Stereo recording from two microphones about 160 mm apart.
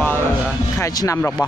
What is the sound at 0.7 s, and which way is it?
Speech, 20° left (ahead or behind).